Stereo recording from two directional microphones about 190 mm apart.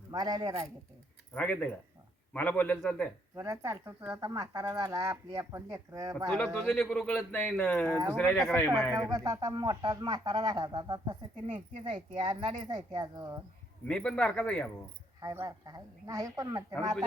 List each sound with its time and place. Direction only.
0.1 s speech: 20° right (ahead or behind)
1.3 s a man's voice: 10° left (ahead or behind)
3.3 s speech: 15° right (ahead or behind)
6.3 s a man's voice: 5° left (ahead or behind)
9.0 s speech: 20° right (ahead or behind)
13.8 s a man's voice: 5° left (ahead or behind)
15.2 s speech: 20° right (ahead or behind)